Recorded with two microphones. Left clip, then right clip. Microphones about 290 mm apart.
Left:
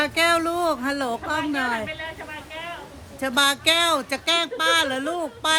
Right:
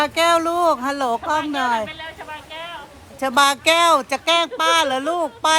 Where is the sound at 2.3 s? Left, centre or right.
Centre.